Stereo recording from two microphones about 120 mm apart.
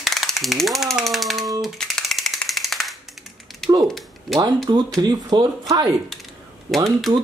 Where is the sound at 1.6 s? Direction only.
5° left (ahead or behind).